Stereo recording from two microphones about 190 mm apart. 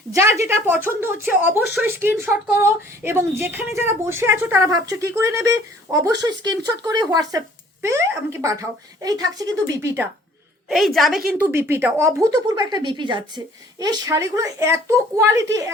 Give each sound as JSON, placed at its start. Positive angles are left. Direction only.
{"t": 0.1, "sound": "speech", "side_deg": -15}
{"t": 10.7, "sound": "speech", "side_deg": 0}